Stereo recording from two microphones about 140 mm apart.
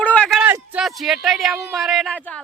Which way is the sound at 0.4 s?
10° right (ahead or behind).